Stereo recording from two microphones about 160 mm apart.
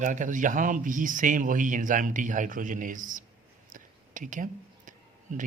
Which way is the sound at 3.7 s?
55° right (ahead or behind).